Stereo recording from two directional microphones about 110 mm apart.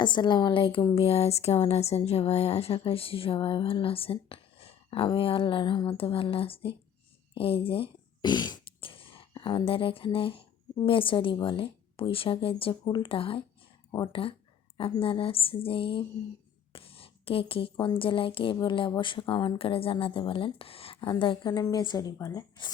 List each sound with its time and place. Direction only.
0.0 s speech: 45° left (ahead or behind)
0.9 s a woman's voice: 65° left (ahead or behind)
8.2 s a woman's voice: 40° left (ahead or behind)